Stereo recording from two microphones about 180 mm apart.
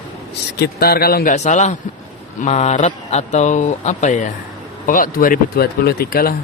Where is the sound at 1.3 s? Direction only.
40° left (ahead or behind).